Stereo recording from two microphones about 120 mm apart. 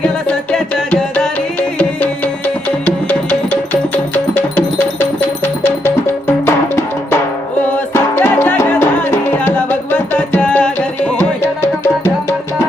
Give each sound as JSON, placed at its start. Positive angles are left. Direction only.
{"t": 0.0, "sound": "music", "side_deg": 10}
{"t": 2.8, "sound": "music", "side_deg": 15}